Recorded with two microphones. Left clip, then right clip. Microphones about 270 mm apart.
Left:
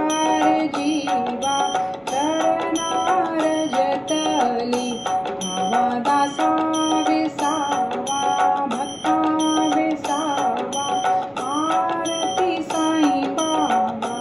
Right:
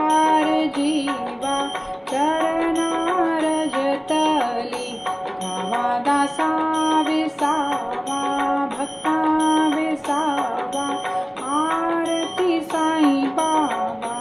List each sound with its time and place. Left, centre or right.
0.0 s music: right
12.4 s music: right